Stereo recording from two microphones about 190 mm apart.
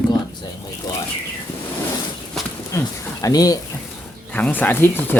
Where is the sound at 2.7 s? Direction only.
15° left (ahead or behind).